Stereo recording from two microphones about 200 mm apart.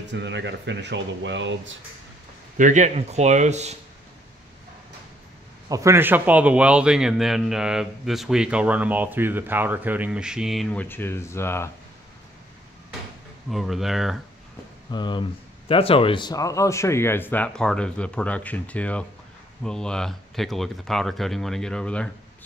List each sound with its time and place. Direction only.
0.1 s speech: 60° right (ahead or behind)
2.5 s speech: 40° right (ahead or behind)
5.7 s a man's voice: 15° right (ahead or behind); by 11.7 s 10° left (ahead or behind)
13.5 s a man's voice: centre (ahead or behind)
14.9 s a man's voice: 20° left (ahead or behind); by 22.1 s 5° left (ahead or behind)